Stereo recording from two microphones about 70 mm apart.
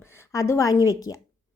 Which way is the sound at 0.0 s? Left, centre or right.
Left.